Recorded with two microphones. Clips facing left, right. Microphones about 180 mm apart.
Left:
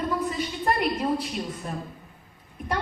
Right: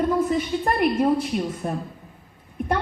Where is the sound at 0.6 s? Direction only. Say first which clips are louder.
Right 3 dB; 50° right (ahead or behind).